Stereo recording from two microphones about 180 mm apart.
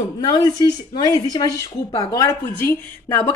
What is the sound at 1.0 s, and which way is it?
A woman's voice, 20° left (ahead or behind).